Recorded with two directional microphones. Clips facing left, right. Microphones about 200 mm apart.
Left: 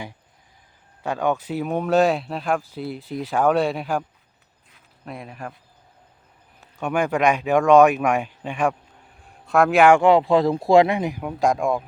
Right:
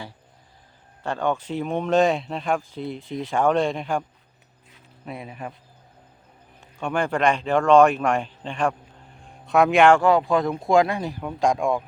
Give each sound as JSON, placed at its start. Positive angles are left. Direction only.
{"t": 1.0, "sound": "speech", "side_deg": 10}
{"t": 4.7, "sound": "a sound", "side_deg": -5}
{"t": 6.6, "sound": "speech", "side_deg": 5}
{"t": 10.0, "sound": "speech", "side_deg": 25}